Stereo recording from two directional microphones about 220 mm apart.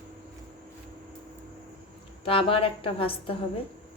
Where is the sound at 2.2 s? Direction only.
25° left (ahead or behind).